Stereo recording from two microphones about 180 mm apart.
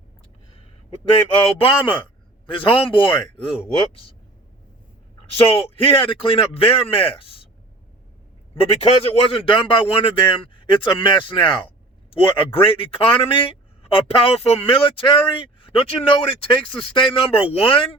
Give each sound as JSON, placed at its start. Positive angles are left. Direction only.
{"t": 1.5, "sound": "a man's voice", "side_deg": 30}
{"t": 5.2, "sound": "a man's voice", "side_deg": 35}
{"t": 8.5, "sound": "a man's voice", "side_deg": 30}